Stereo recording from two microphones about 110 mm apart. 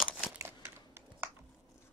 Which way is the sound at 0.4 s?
25° right (ahead or behind).